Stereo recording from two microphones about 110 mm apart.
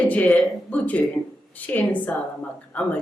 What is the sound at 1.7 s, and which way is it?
A man's voice, 15° left (ahead or behind).